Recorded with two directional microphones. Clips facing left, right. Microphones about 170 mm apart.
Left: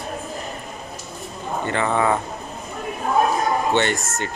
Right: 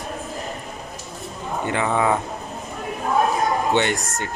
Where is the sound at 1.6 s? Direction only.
10° right (ahead or behind).